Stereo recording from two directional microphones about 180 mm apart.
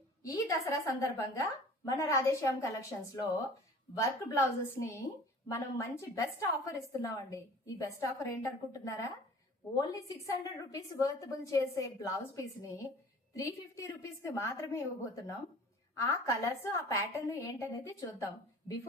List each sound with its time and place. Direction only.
0.2 s a woman's voice: 20° left (ahead or behind)
10.2 s a woman's voice: 20° left (ahead or behind)